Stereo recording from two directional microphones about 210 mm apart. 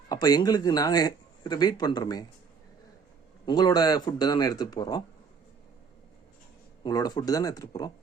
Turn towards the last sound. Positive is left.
turn(degrees=15)  # may be behind; listen again after turning